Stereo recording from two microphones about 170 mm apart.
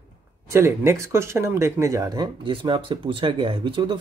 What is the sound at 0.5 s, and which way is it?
Speech, 15° right (ahead or behind).